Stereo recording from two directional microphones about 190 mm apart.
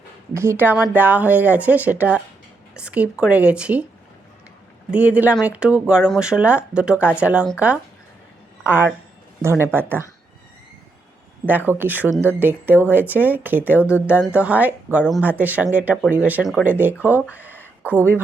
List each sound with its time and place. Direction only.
0.3 s speech: 10° right (ahead or behind)
4.9 s speech: 5° right (ahead or behind)
8.6 s speech: 10° right (ahead or behind)
11.4 s speech: 10° right (ahead or behind)
13.7 s speech: 10° left (ahead or behind)
14.1 s speech: 5° right (ahead or behind)
17.5 s a sound: 10° left (ahead or behind)